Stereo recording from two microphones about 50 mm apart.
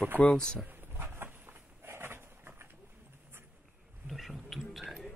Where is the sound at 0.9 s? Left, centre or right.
Right.